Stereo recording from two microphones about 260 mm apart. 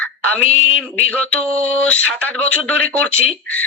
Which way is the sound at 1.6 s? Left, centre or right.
Centre.